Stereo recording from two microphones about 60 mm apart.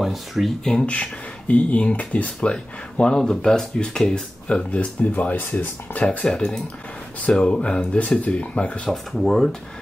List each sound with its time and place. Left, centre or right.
0.0 s speech: centre
1.5 s speech: left
6.2 s speech: centre
8.9 s speech: centre